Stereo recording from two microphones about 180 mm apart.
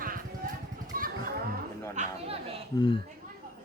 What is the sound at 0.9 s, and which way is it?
Children playing, 55° right (ahead or behind).